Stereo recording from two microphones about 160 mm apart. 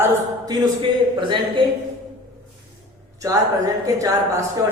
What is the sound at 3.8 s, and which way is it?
Speech, 20° right (ahead or behind).